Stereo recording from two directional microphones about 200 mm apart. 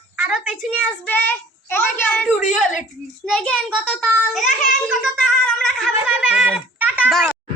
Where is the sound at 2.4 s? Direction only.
35° left (ahead or behind).